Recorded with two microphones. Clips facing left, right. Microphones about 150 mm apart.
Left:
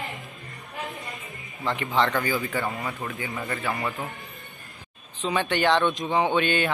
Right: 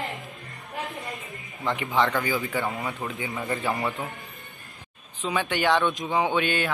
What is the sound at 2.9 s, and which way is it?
Speech, 20° right (ahead or behind).